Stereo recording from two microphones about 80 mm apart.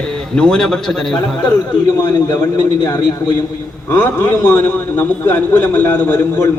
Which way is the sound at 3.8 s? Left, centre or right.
Left.